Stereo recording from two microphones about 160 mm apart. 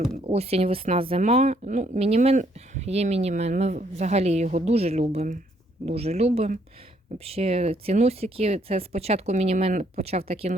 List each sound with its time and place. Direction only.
0.3 s speech: 40° right (ahead or behind)